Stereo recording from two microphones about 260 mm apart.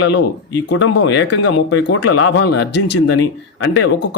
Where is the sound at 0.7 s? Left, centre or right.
Left.